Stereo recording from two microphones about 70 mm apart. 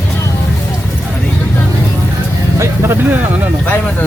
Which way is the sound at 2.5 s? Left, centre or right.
Right.